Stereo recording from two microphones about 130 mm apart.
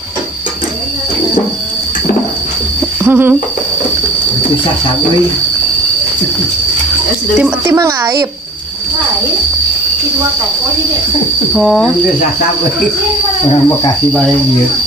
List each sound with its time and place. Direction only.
3.0 s a sound: 15° right (ahead or behind)
7.6 s a woman's voice: 20° right (ahead or behind)
11.5 s speech: centre (ahead or behind)